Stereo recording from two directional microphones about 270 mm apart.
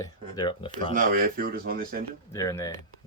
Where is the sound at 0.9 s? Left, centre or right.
Right.